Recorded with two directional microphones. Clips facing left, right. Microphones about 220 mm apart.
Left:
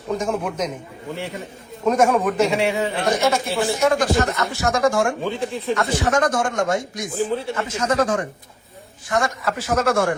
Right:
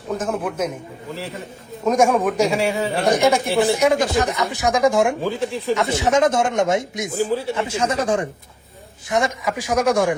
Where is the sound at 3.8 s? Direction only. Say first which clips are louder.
Right 1 dB; 20° right (ahead or behind).